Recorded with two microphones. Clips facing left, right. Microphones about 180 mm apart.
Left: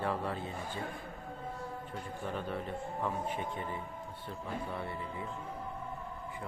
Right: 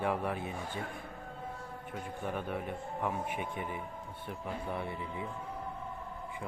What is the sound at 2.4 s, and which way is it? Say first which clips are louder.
A man's voice: even; 10° right (ahead or behind).